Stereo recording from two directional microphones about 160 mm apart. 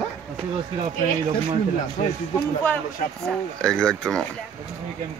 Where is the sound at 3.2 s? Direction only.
5° left (ahead or behind).